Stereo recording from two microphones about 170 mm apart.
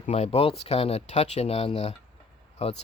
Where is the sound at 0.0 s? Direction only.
40° left (ahead or behind).